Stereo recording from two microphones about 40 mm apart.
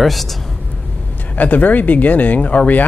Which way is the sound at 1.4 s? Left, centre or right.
Left.